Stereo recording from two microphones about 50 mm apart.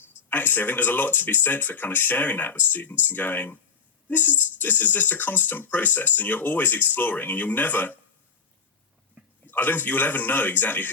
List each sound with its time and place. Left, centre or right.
0.3 s speech: left
9.2 s a sound: right
9.5 s speech: left